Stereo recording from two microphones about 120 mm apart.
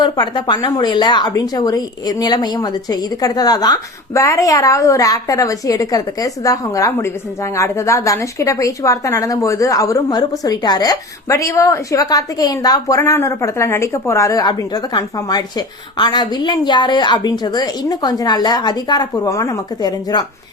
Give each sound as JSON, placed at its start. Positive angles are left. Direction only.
{"t": 0.0, "sound": "speech", "side_deg": 35}